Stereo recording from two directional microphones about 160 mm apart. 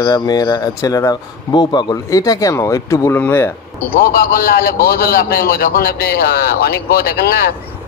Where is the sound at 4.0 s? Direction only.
70° left (ahead or behind).